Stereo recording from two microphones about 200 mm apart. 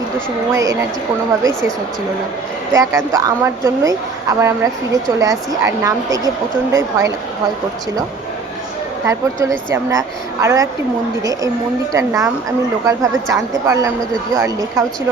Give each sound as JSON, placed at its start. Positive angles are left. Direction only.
{"t": 0.5, "sound": "a woman's voice", "side_deg": -15}
{"t": 2.7, "sound": "a woman's voice", "side_deg": -15}
{"t": 9.0, "sound": "a woman's voice", "side_deg": -15}